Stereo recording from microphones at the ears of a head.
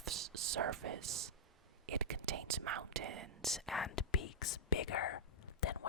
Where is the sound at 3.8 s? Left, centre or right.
Left.